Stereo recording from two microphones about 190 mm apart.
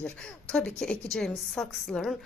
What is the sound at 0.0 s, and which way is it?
A woman's voice, 5° left (ahead or behind).